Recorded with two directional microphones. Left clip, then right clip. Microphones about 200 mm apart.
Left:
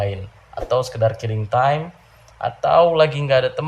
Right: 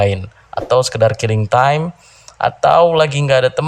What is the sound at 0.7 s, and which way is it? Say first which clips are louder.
Speech: right 6 dB; 40° right (ahead or behind).